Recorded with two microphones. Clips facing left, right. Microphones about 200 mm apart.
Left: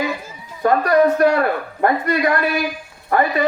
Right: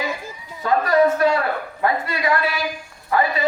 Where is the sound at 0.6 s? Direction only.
55° left (ahead or behind).